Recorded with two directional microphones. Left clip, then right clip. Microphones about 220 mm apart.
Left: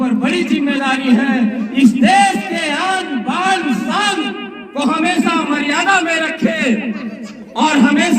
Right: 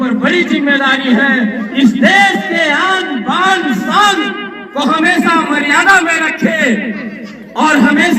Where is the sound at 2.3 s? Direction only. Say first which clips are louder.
Right 6 dB; 30° left (ahead or behind).